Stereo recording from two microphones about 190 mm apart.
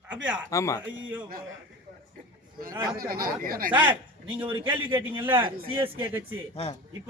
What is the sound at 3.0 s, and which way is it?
Speech, 50° right (ahead or behind).